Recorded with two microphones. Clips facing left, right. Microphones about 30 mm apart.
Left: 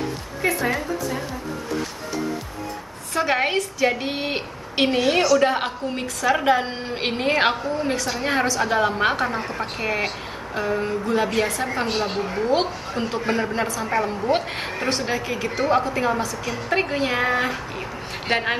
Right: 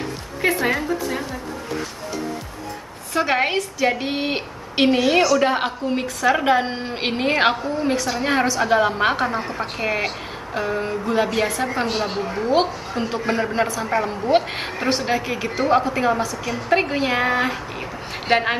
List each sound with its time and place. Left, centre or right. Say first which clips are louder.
0.4 s a woman's voice: right 3 dB; right
3.2 s a woman's voice: right 1 dB; centre